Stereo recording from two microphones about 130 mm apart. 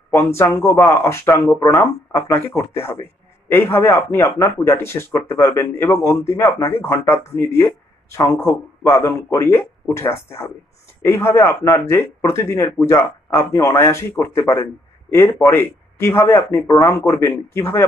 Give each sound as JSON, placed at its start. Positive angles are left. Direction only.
{"t": 0.4, "sound": "a man's voice", "side_deg": 20}